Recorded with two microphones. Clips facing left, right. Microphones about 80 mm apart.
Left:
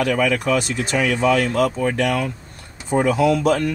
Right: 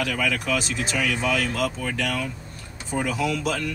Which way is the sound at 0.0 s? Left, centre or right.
Left.